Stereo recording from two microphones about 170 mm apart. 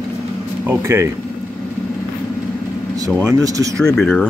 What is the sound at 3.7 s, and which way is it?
Speech, 5° left (ahead or behind).